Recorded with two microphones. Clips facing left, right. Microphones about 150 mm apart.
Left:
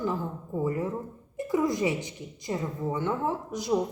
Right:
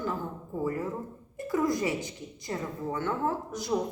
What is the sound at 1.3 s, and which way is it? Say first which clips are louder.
A woman's voice: left 1 dB; 20° left (ahead or behind).